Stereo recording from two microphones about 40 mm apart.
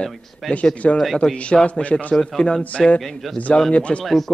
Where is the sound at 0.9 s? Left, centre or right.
Centre.